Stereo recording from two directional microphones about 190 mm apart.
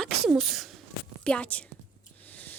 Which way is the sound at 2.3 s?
10° left (ahead or behind).